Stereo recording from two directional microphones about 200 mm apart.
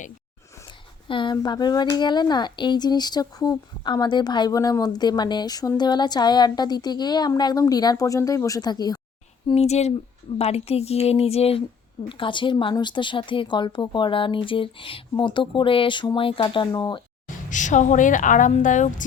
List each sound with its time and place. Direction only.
1.0 s speech: 25° left (ahead or behind)
9.5 s speech: 30° left (ahead or behind)
17.5 s speech: 40° left (ahead or behind)